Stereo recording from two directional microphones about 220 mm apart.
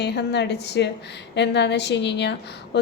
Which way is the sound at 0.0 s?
50° left (ahead or behind).